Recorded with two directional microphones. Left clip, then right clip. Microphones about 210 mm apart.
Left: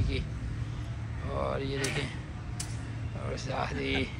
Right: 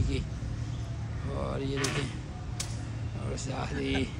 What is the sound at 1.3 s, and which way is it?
Speech, 10° right (ahead or behind).